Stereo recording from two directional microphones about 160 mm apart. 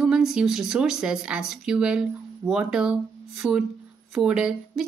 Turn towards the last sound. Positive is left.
turn(degrees=-5)  # may be behind; listen again after turning